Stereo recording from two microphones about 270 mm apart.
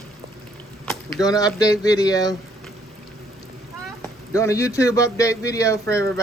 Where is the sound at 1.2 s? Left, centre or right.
Centre.